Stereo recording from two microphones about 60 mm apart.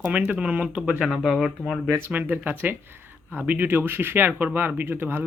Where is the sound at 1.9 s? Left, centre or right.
Right.